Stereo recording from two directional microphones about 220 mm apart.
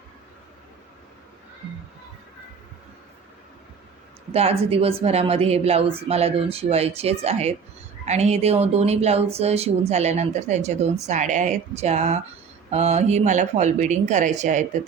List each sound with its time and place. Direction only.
4.3 s speech: 30° right (ahead or behind)